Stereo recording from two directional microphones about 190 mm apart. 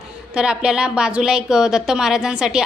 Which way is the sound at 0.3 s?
5° right (ahead or behind).